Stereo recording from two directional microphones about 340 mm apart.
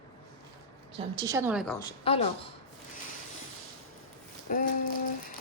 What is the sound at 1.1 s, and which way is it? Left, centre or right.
Speech, centre.